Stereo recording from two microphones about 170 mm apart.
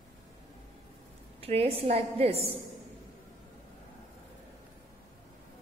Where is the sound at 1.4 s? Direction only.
35° right (ahead or behind).